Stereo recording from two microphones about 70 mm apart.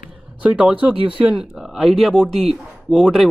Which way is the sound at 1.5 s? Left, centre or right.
Centre.